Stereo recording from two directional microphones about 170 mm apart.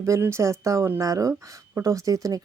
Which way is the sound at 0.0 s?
15° right (ahead or behind).